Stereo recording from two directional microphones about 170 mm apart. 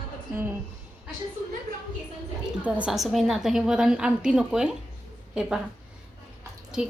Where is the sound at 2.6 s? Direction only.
5° right (ahead or behind).